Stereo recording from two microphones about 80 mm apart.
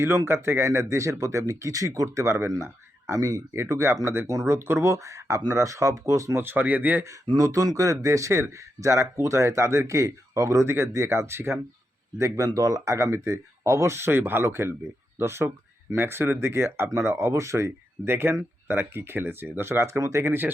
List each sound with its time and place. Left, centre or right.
0.3 s speech: right
6.4 s speech: right
7.3 s speech: right
12.5 s speech: right